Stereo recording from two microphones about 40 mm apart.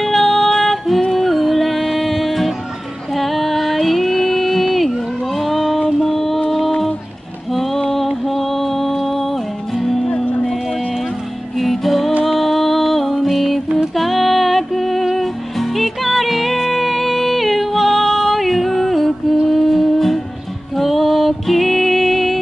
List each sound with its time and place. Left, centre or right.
0.0 s music: centre
7.5 s music: centre
11.5 s music: centre